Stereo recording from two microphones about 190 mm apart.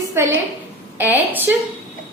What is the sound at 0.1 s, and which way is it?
A woman's voice, 15° right (ahead or behind).